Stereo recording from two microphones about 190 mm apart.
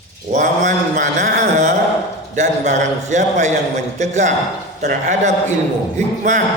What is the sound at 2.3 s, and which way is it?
A man's voice, 40° right (ahead or behind).